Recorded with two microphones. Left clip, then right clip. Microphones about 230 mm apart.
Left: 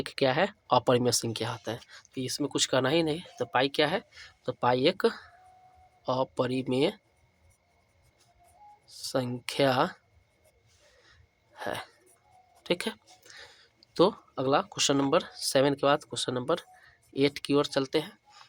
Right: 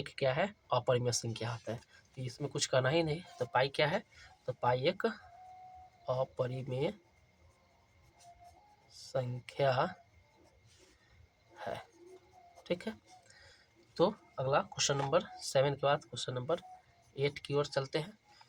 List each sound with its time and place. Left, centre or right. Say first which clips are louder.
0.0 s speech: left 7 dB; left
8.9 s speech: left 7 dB; left
11.5 s speech: left 7 dB; left